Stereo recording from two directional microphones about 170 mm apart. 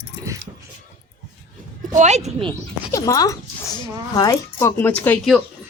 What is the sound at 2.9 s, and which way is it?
Speech, 20° left (ahead or behind).